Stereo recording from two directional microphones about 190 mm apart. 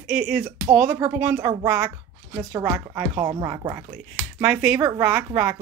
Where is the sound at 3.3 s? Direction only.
20° right (ahead or behind).